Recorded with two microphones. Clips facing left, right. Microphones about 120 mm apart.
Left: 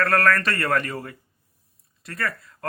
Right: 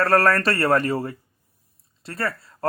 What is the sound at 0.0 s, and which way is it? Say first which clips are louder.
Speech: right 2 dB; 30° right (ahead or behind).